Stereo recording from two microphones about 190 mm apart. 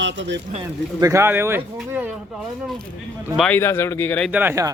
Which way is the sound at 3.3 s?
Centre (ahead or behind).